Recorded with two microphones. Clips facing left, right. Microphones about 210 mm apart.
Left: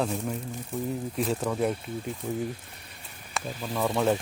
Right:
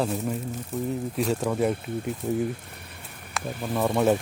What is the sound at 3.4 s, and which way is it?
Speech, 60° right (ahead or behind).